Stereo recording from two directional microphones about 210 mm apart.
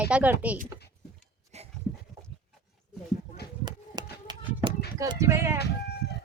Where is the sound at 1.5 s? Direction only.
30° right (ahead or behind).